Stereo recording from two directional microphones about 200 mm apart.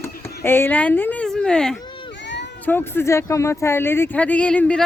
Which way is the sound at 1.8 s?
25° left (ahead or behind).